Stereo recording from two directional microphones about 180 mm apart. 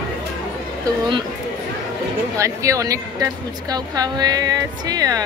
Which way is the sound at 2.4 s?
15° right (ahead or behind).